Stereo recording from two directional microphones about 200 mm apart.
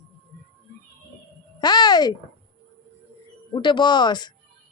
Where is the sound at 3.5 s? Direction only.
25° left (ahead or behind).